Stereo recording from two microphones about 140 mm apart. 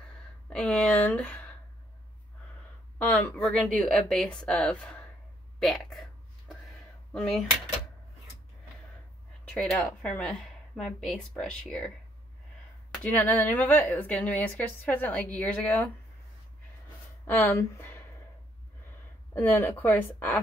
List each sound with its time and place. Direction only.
0.5 s speech: 5° left (ahead or behind)
3.0 s a woman's voice: 10° left (ahead or behind)
9.4 s a woman's voice: 5° left (ahead or behind)
12.9 s speech: 10° left (ahead or behind)
17.3 s speech: 20° left (ahead or behind)
19.3 s speech: 20° left (ahead or behind)